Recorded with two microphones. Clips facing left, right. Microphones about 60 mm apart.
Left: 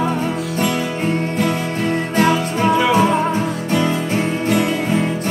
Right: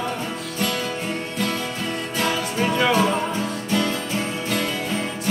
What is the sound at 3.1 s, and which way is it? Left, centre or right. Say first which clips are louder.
Music: left 6 dB; left.